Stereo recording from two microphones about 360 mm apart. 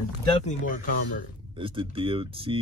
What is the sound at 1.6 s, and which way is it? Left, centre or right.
Speech, centre.